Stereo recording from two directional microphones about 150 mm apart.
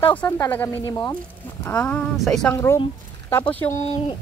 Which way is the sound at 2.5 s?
15° left (ahead or behind).